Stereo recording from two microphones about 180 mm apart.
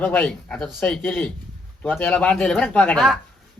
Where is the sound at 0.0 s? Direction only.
5° left (ahead or behind).